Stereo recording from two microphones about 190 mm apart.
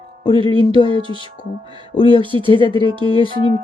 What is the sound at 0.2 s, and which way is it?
Music, 25° left (ahead or behind).